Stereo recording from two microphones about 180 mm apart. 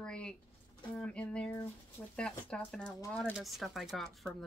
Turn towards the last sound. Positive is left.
turn(degrees=0)  # may be behind; listen again after turning